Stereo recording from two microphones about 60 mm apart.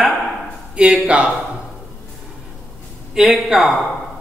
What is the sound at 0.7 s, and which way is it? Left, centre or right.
Speech, centre.